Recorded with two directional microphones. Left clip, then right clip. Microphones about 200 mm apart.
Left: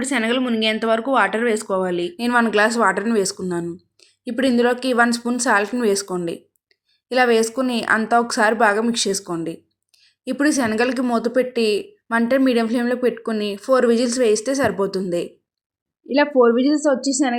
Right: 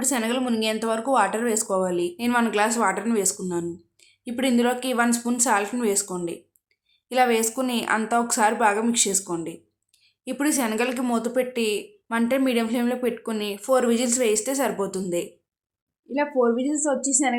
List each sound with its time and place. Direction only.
0.0 s a woman's voice: 10° left (ahead or behind)
2.1 s a woman's voice: 20° left (ahead or behind)
16.0 s speech: 30° left (ahead or behind)